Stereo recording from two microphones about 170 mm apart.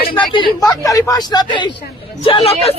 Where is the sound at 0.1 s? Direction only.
30° left (ahead or behind).